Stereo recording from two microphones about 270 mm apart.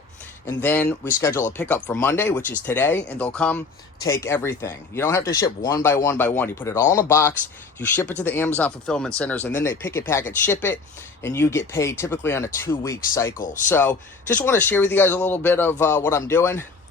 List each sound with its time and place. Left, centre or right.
0.4 s speech: centre
13.3 s speech: left
13.7 s speech: centre